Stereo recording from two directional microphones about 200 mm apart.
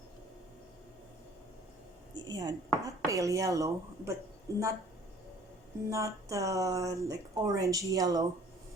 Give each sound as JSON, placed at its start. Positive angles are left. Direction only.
{"t": 2.2, "sound": "speech", "side_deg": -20}
{"t": 5.9, "sound": "speech", "side_deg": -15}